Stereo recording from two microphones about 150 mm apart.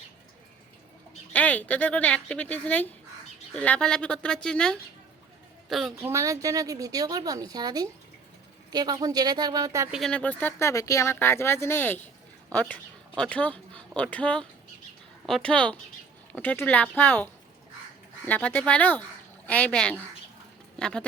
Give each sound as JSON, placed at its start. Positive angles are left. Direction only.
{"t": 1.3, "sound": "a woman's voice", "side_deg": 10}
{"t": 6.0, "sound": "a woman's voice", "side_deg": -15}
{"t": 9.9, "sound": "speech", "side_deg": 5}
{"t": 18.3, "sound": "speech", "side_deg": 10}